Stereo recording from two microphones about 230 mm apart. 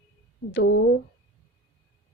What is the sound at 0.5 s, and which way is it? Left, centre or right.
Speech, left.